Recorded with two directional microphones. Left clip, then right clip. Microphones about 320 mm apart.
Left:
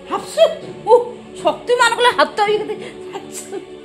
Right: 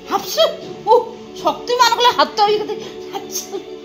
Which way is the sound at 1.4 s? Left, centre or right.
Centre.